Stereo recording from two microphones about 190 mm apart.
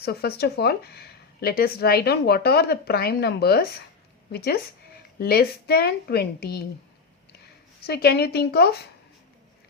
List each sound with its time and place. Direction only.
0.0 s speech: 55° left (ahead or behind)
7.9 s speech: 55° left (ahead or behind)